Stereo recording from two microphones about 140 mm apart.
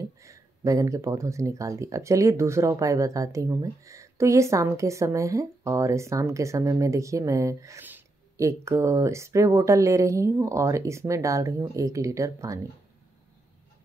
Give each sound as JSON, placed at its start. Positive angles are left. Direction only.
{"t": 0.0, "sound": "speech", "side_deg": -25}